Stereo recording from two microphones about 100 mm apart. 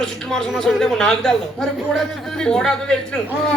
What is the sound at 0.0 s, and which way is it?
A woman's voice, 5° left (ahead or behind).